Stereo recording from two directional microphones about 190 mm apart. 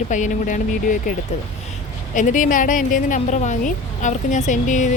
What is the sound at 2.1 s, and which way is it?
A woman's voice, 45° left (ahead or behind).